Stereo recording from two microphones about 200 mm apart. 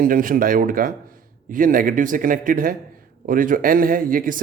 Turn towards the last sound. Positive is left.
turn(degrees=-45)  # may be behind; listen again after turning